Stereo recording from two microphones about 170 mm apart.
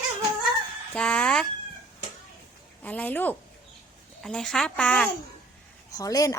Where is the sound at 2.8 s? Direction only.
10° left (ahead or behind).